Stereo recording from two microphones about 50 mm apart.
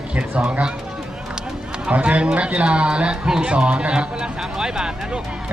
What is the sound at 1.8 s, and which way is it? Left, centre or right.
Speech, right.